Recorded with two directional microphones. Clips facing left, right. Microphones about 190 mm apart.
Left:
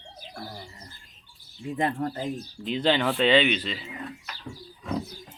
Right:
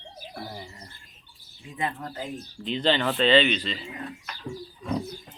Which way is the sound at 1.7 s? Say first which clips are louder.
Left 4 dB; 40° left (ahead or behind).